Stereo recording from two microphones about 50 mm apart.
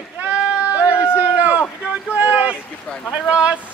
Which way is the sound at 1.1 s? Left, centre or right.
Right.